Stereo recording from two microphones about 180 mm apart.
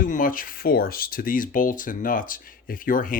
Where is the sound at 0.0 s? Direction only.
50° left (ahead or behind).